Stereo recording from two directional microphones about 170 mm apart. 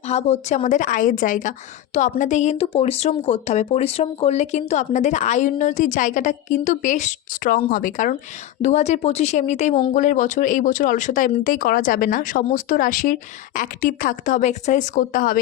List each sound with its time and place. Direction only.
0.1 s a woman's voice: 40° left (ahead or behind)
8.6 s a woman's voice: 45° left (ahead or behind)